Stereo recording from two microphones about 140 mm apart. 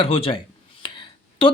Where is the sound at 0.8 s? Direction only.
35° left (ahead or behind).